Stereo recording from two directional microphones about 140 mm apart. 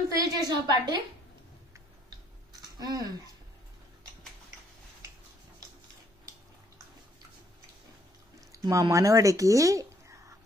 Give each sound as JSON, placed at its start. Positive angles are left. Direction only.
{"t": 0.1, "sound": "a woman's voice", "side_deg": -25}
{"t": 2.8, "sound": "a woman's voice", "side_deg": -25}
{"t": 8.5, "sound": "a sound", "side_deg": -25}
{"t": 8.9, "sound": "a woman's voice", "side_deg": -25}